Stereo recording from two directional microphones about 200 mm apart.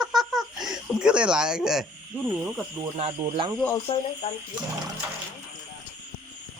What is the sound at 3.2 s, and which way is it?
Speech, 25° right (ahead or behind).